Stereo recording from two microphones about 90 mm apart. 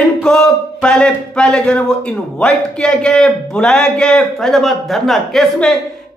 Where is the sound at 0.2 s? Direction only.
5° left (ahead or behind).